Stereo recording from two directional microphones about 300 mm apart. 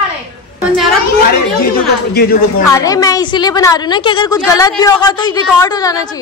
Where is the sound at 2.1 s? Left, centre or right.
Left.